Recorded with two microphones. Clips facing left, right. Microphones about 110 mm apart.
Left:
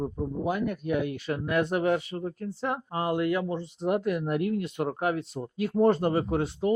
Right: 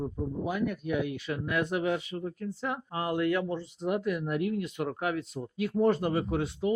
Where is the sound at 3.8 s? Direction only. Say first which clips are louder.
Left 3 dB; 40° left (ahead or behind).